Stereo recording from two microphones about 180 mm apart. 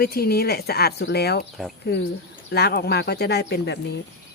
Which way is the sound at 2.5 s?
60° left (ahead or behind).